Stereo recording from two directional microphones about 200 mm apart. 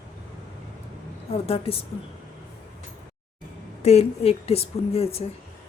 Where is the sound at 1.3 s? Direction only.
30° left (ahead or behind).